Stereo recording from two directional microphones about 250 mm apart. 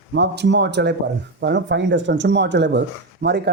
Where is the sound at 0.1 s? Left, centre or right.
Right.